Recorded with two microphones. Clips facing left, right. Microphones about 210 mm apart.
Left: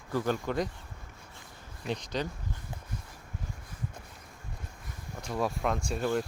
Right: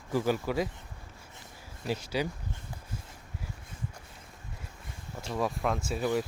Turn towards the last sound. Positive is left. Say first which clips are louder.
# even
turn(degrees=-5)  # may be behind; listen again after turning